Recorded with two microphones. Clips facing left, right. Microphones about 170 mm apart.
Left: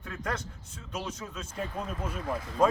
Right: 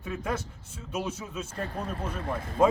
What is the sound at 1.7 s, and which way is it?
Speech, 35° right (ahead or behind).